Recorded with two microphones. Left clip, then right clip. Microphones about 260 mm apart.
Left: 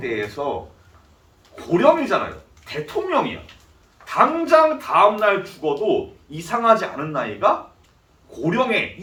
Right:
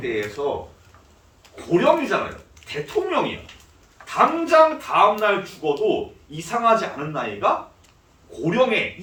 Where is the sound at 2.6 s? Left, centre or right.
Right.